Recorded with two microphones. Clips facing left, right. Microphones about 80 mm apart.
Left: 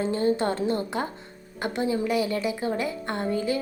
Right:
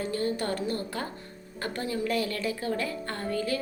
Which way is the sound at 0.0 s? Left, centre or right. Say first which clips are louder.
Left 6 dB; left.